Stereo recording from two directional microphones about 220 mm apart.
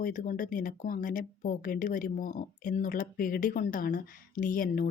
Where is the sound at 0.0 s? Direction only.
40° left (ahead or behind).